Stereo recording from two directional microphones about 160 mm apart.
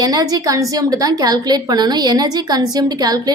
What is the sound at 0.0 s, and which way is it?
A woman's voice, 25° right (ahead or behind).